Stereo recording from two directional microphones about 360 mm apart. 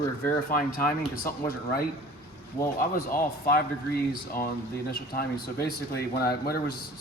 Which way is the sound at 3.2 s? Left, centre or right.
Left.